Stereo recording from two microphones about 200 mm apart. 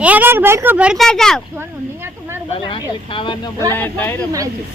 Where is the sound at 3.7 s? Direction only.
10° left (ahead or behind).